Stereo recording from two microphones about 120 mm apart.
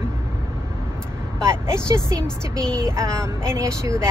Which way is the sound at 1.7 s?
25° right (ahead or behind).